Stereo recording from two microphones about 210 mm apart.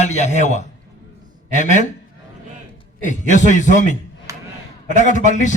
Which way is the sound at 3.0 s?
35° left (ahead or behind).